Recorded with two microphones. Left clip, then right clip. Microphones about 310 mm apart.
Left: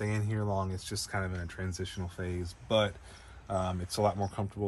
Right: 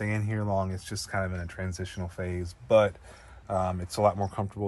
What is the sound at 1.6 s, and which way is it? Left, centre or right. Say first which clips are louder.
Speech: right 2 dB; right.